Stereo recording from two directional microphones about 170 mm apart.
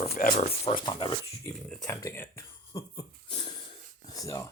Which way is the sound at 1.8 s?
15° left (ahead or behind).